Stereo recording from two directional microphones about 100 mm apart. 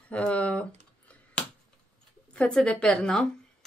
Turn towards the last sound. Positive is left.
turn(degrees=10)  # may be behind; listen again after turning